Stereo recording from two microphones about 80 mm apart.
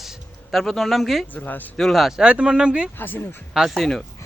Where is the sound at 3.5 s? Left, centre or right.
Centre.